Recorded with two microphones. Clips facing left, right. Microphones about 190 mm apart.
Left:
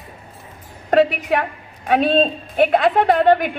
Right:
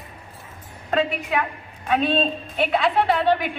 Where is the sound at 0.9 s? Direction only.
65° left (ahead or behind).